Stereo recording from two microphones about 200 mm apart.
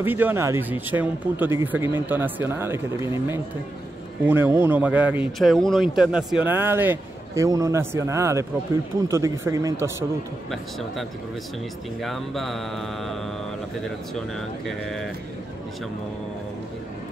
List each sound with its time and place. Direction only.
0.0 s a man's voice: 10° right (ahead or behind)
10.5 s mantra: centre (ahead or behind)